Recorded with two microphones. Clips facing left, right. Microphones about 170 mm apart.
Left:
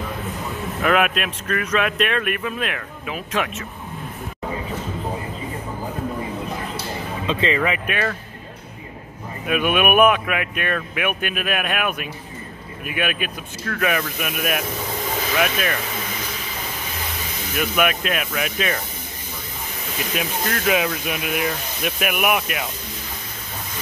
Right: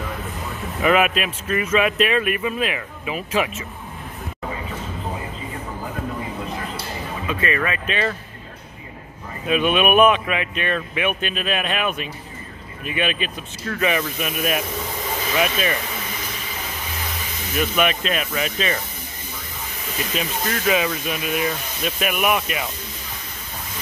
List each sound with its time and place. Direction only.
0.8 s speech: 5° right (ahead or behind)
7.2 s speech: 20° left (ahead or behind)
9.5 s speech: 10° left (ahead or behind)
17.6 s speech: 5° left (ahead or behind)
20.2 s speech: centre (ahead or behind)